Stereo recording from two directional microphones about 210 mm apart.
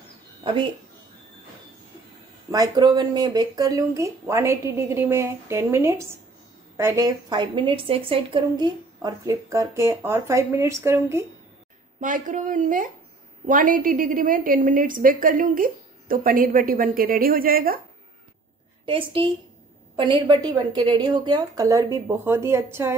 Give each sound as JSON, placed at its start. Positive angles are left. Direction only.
{"t": 0.4, "sound": "speech", "side_deg": -25}
{"t": 2.5, "sound": "speech", "side_deg": -20}
{"t": 12.0, "sound": "a woman's voice", "side_deg": -40}
{"t": 18.9, "sound": "a woman's voice", "side_deg": -25}